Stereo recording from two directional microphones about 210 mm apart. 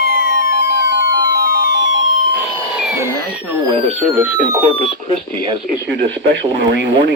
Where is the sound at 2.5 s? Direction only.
15° right (ahead or behind).